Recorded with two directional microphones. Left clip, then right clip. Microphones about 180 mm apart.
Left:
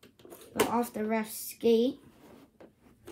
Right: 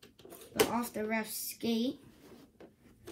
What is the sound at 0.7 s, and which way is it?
Speech, 30° left (ahead or behind).